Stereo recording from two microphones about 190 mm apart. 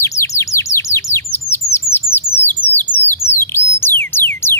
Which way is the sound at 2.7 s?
10° left (ahead or behind).